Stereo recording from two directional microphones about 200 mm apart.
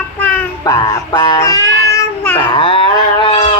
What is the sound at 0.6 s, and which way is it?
Music, 20° left (ahead or behind).